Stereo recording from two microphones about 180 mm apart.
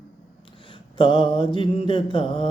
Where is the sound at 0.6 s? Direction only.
25° left (ahead or behind).